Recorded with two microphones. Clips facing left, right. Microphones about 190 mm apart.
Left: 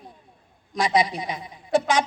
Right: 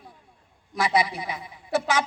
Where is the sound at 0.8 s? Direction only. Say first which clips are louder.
Left 2 dB; 15° left (ahead or behind).